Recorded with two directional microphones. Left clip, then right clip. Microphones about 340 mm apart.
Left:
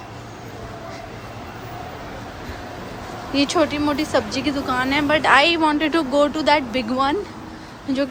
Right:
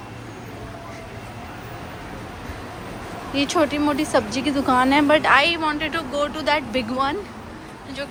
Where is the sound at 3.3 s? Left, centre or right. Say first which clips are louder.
Left 1 dB; centre.